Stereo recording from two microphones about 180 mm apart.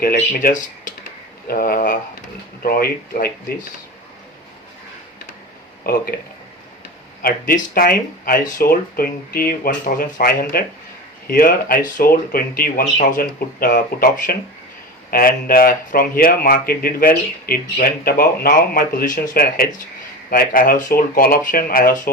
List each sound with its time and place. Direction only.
0.0 s speech: 55° left (ahead or behind)
5.8 s speech: 55° left (ahead or behind)
7.2 s speech: 50° left (ahead or behind)